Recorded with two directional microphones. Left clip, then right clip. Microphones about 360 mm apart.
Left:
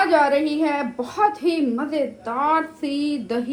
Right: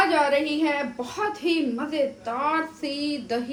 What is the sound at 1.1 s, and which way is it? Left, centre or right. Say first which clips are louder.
A woman's voice: left 6 dB; centre.